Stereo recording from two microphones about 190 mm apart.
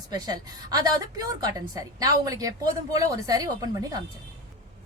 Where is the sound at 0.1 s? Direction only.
20° right (ahead or behind).